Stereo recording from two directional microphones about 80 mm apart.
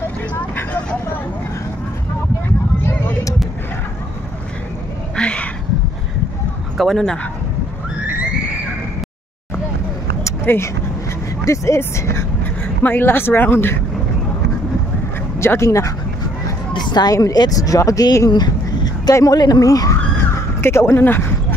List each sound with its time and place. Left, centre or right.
5.1 s cat: centre
6.8 s speech: centre
10.4 s speech: left
11.4 s speech: left
15.3 s speech: left
16.7 s a sound: left
17.1 s speech: left
20.6 s speech: left